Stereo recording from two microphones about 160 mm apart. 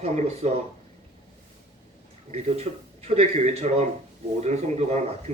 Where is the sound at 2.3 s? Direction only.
40° right (ahead or behind).